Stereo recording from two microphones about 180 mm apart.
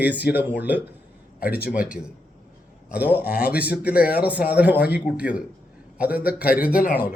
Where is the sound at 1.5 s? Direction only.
60° left (ahead or behind).